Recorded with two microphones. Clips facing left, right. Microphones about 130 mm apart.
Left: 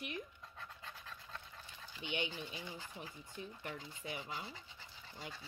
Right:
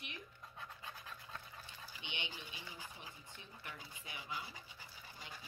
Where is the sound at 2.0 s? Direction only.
40° left (ahead or behind).